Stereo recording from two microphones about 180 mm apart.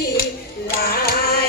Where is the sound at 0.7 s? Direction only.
55° left (ahead or behind).